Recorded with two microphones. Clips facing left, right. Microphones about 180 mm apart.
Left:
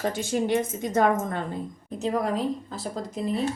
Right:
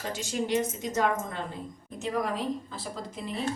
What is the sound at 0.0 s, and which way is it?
A woman's voice, 55° left (ahead or behind).